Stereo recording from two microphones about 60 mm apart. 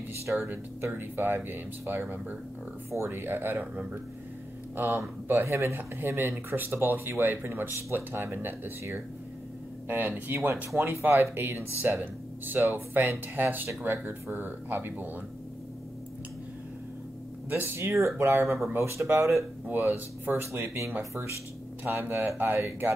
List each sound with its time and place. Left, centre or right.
0.3 s speech: right
2.9 s speech: right
5.4 s speech: right
9.8 s speech: right
17.5 s speech: right
19.7 s speech: right
21.0 s speech: right
21.8 s speech: right